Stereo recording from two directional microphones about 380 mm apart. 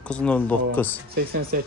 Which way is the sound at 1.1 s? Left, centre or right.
Right.